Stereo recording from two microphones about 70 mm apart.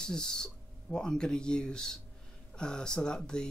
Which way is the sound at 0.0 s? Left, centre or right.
Centre.